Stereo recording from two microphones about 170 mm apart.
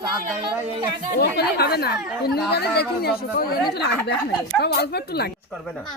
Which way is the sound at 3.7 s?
75° left (ahead or behind).